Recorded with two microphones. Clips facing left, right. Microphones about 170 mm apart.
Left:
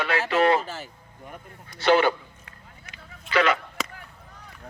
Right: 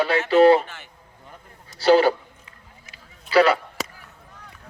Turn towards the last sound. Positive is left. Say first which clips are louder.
# right 5 dB
turn(degrees=-35)  # may be behind; listen again after turning